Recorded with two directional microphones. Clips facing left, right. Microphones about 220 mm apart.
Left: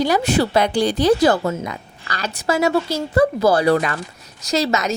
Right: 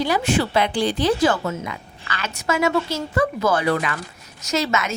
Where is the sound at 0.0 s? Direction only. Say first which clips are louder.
Left 3 dB; 40° left (ahead or behind).